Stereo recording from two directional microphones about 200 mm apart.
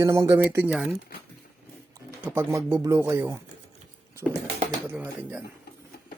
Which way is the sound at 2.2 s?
10° right (ahead or behind).